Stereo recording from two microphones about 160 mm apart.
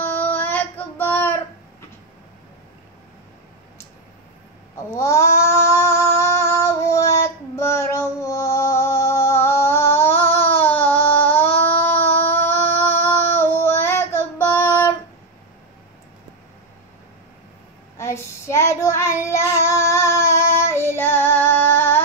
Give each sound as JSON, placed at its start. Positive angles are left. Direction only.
{"t": 0.0, "sound": "child singing", "side_deg": 10}
{"t": 4.9, "sound": "child singing", "side_deg": 20}
{"t": 11.8, "sound": "a sound", "side_deg": 10}
{"t": 12.7, "sound": "child singing", "side_deg": 15}
{"t": 17.9, "sound": "child singing", "side_deg": 15}